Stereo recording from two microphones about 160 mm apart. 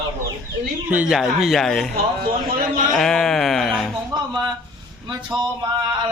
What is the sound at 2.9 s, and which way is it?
Speech, centre (ahead or behind).